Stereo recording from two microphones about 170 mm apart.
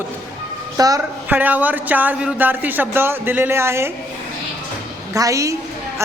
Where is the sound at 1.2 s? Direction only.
10° right (ahead or behind).